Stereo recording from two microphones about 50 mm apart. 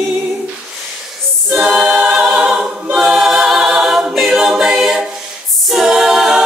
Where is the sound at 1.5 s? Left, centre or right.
Centre.